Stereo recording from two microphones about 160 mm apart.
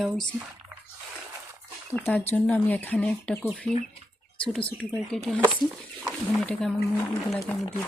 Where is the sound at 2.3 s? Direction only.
10° left (ahead or behind).